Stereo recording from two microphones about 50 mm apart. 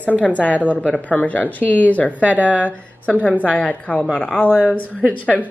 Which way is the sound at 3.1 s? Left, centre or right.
Left.